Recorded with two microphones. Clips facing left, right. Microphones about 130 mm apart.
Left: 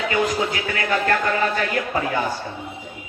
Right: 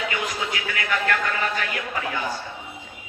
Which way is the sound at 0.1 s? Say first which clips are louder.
Left 7 dB; 35° left (ahead or behind).